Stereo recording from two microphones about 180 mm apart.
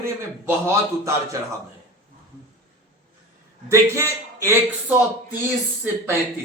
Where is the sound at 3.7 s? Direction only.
15° right (ahead or behind).